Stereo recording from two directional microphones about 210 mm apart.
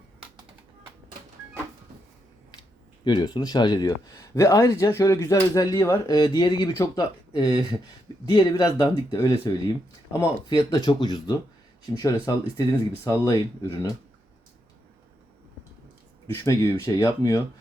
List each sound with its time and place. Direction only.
3.0 s speech: 20° left (ahead or behind)
16.2 s speech: 15° left (ahead or behind)